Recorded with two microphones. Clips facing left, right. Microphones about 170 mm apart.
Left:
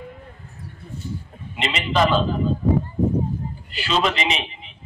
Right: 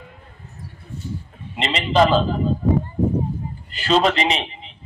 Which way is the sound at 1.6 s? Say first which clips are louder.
Right 3 dB; 35° right (ahead or behind).